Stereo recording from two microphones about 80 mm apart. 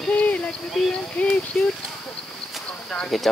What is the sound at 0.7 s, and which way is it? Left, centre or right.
Speech, centre.